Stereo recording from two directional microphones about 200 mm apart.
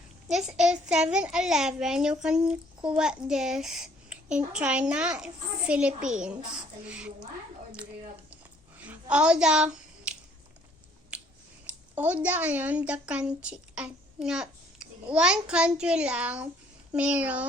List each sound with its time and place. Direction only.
0.3 s a child's voice: 5° right (ahead or behind)
8.8 s a sound: 5° right (ahead or behind)
11.1 s finger snapping: 5° right (ahead or behind)
11.9 s a woman's voice: 10° right (ahead or behind)